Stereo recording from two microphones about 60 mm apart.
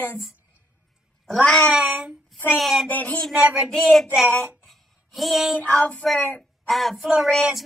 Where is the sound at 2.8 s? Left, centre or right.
Left.